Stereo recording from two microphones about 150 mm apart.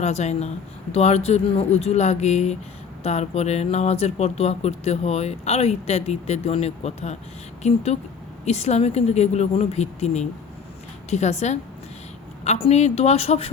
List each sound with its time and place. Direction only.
0.0 s speech: 45° left (ahead or behind)